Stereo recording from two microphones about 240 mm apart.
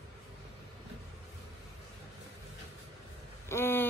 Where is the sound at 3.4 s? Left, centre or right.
Centre.